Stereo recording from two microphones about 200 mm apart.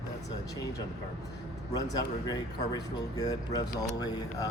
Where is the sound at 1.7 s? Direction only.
20° left (ahead or behind).